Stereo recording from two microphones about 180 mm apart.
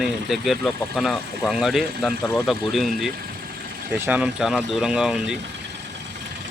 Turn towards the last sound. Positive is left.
turn(degrees=-5)  # may be behind; listen again after turning